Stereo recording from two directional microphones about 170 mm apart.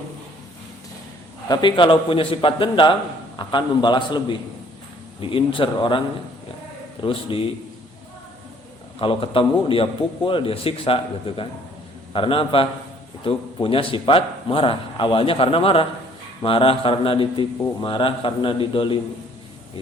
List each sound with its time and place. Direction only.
1.5 s a man's voice: 25° left (ahead or behind)
7.0 s a man's voice: 30° left (ahead or behind)
9.0 s a man's voice: 30° left (ahead or behind)